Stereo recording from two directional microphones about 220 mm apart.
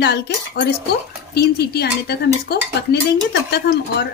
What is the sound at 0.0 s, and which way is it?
Speech, 50° left (ahead or behind).